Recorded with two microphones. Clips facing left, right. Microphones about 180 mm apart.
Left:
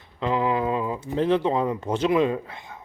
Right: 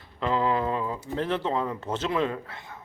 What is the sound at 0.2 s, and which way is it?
A man's voice, 15° left (ahead or behind).